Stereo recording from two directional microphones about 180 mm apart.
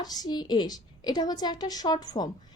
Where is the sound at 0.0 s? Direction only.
20° left (ahead or behind).